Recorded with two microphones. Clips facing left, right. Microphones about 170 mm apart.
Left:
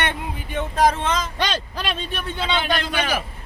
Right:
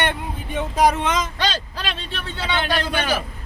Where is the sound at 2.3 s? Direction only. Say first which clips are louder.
Left 2 dB; 20° left (ahead or behind).